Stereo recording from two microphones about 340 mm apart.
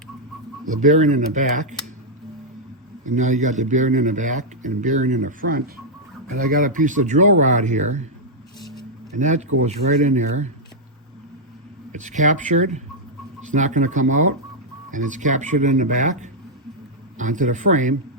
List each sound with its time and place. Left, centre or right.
0.8 s speech: right
3.2 s speech: right
9.1 s speech: right
11.9 s speech: right